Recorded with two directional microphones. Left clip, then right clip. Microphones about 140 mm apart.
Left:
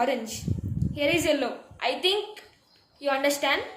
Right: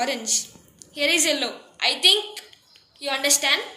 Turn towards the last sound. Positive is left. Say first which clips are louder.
# right 3 dB
turn(degrees=55)  # may be behind; listen again after turning